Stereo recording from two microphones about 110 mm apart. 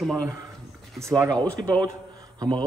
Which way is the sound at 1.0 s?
25° right (ahead or behind).